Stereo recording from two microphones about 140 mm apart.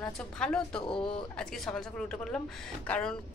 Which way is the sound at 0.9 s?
35° left (ahead or behind).